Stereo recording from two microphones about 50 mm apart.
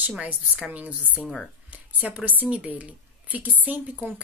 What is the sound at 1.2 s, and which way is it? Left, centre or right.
Speech, centre.